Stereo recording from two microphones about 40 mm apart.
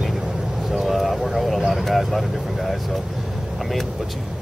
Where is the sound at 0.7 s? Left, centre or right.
Centre.